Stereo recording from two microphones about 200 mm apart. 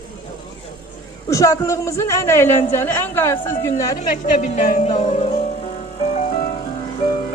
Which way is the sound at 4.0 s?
35° left (ahead or behind).